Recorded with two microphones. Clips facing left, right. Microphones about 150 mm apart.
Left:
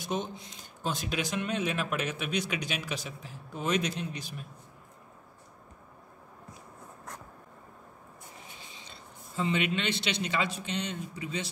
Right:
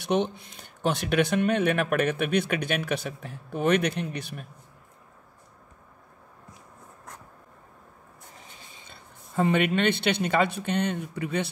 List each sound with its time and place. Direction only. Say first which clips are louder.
0.0 s speech: right 8 dB; 70° right (ahead or behind)
8.8 s speech: even; 55° right (ahead or behind)